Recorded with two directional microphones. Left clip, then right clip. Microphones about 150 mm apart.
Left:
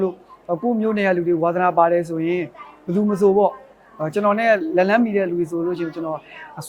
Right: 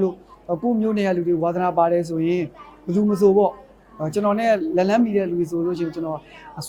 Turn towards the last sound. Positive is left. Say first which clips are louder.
# left 1 dB
turn(degrees=35)  # may be behind; listen again after turning